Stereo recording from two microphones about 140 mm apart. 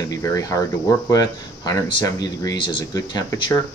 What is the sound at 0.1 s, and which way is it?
Speech, 25° left (ahead or behind).